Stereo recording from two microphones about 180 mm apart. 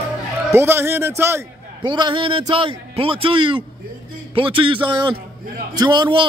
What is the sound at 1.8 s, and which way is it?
A man's voice, 25° right (ahead or behind).